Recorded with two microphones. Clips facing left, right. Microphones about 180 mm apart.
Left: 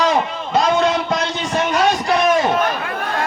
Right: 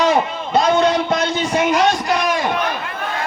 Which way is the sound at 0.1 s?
Centre (ahead or behind).